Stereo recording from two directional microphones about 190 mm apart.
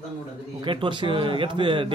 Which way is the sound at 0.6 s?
25° right (ahead or behind).